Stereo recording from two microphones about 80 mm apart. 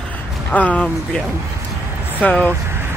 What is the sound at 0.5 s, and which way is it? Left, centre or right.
Speech, centre.